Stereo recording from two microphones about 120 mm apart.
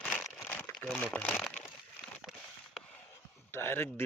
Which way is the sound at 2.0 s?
Centre (ahead or behind).